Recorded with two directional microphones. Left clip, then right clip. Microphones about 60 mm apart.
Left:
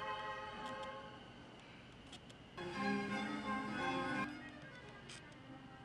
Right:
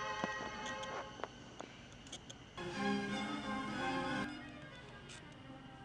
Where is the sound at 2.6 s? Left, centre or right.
Right.